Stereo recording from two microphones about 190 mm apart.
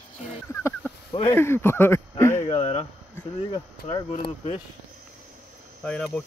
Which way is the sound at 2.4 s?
30° left (ahead or behind).